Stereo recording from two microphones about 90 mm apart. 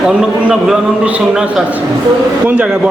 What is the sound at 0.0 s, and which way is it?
A man's voice, 10° right (ahead or behind).